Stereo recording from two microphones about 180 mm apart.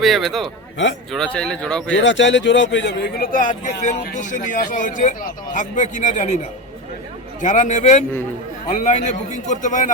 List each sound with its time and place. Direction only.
0.0 s speech: centre (ahead or behind)
1.9 s a man's voice: 90° left; by 3.2 s 70° left (ahead or behind)
3.3 s a man's voice: 45° left (ahead or behind)
7.4 s a man's voice: 45° left (ahead or behind)